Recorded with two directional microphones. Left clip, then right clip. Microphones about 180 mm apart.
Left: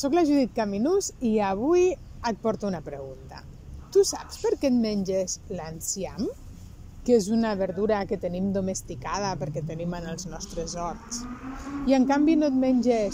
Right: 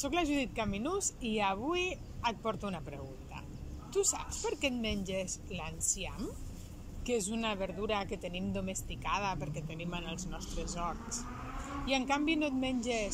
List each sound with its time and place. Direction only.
0.0 s a woman's voice: 30° left (ahead or behind)